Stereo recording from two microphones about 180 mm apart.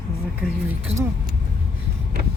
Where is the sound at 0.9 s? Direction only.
35° right (ahead or behind).